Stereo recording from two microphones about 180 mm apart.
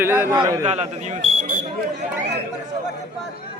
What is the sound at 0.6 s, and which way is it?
Speech, 40° right (ahead or behind).